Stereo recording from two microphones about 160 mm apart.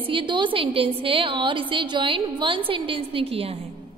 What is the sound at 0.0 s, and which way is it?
A woman's voice, 30° right (ahead or behind).